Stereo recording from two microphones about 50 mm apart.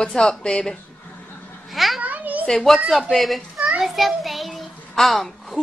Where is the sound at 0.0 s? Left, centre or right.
Centre.